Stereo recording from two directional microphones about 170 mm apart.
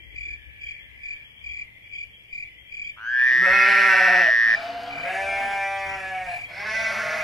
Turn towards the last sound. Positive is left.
turn(degrees=0)  # may be behind; listen again after turning